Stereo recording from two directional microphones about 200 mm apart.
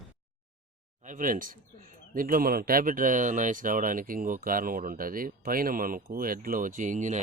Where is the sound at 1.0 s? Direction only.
40° right (ahead or behind).